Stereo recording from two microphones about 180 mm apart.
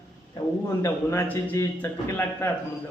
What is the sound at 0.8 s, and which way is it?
A man's voice, 15° left (ahead or behind).